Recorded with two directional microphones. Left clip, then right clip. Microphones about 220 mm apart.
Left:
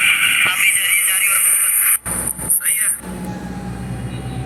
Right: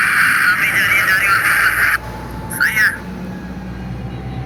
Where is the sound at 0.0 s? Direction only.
40° left (ahead or behind).